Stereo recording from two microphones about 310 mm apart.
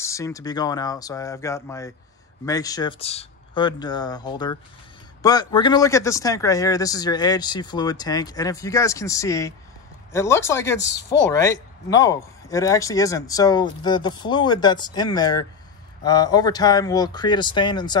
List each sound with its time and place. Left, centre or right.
0.0 s speech: centre
10.8 s speech: left
11.1 s speech: centre